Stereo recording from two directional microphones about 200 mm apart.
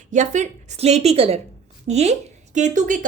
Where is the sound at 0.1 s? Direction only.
35° right (ahead or behind).